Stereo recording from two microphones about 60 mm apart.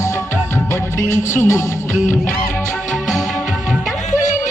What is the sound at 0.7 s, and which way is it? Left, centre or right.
Music, left.